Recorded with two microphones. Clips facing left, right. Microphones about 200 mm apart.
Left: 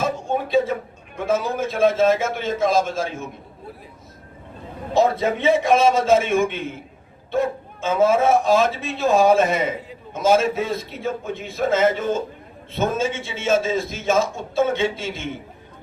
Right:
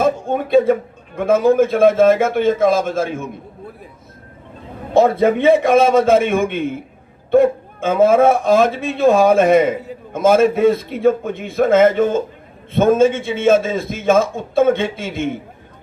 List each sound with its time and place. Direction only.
0.0 s a man's voice: 55° right (ahead or behind)
4.9 s a man's voice: 55° right (ahead or behind)